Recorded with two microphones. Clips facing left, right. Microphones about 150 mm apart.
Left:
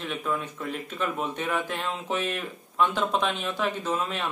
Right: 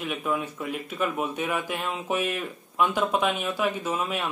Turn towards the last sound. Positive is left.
turn(degrees=-10)  # may be behind; listen again after turning